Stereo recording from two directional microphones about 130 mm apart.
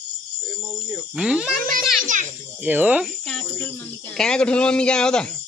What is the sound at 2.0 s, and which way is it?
Speech, 75° right (ahead or behind).